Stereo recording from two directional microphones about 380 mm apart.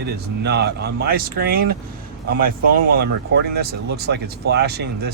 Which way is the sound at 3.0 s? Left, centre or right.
Right.